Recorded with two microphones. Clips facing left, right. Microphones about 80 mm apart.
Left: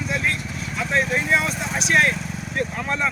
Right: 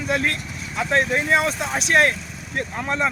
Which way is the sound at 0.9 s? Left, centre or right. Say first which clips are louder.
Right 2 dB; right.